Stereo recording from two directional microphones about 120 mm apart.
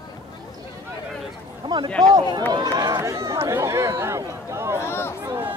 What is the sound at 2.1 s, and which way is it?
Speech, 40° right (ahead or behind).